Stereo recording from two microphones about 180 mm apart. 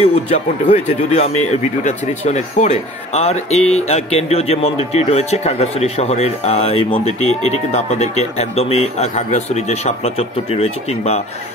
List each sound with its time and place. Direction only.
0.0 s speech: 35° left (ahead or behind)